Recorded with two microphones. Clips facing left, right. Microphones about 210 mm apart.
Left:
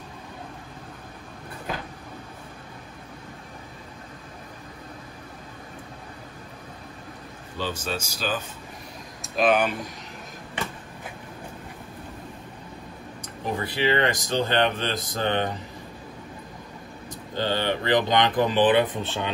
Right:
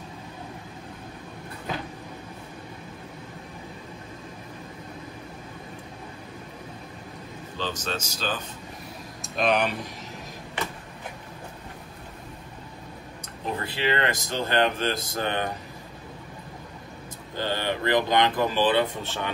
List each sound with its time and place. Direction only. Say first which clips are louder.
7.5 s speech: left 1 dB; 10° left (ahead or behind)
13.5 s speech: left 3 dB; 15° left (ahead or behind)
17.4 s speech: left 2 dB; 20° left (ahead or behind)